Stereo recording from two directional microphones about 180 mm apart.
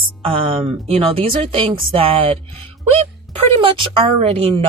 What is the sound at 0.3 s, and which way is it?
A woman's voice, 30° right (ahead or behind).